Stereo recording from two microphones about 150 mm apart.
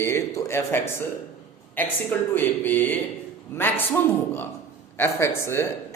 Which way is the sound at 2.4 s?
15° left (ahead or behind).